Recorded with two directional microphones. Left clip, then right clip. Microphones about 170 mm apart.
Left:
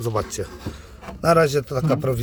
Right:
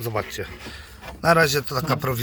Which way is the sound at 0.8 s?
15° left (ahead or behind).